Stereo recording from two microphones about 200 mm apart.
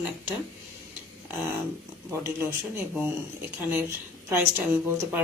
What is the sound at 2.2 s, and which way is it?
A woman's voice, 10° right (ahead or behind).